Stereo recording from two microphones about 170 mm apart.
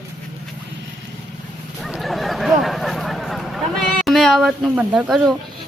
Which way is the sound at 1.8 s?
Centre (ahead or behind).